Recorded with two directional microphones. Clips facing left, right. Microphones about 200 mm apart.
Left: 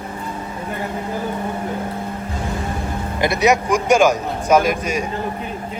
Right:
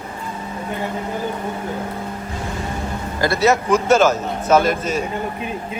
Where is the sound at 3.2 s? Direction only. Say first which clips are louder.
Even; 20° left (ahead or behind).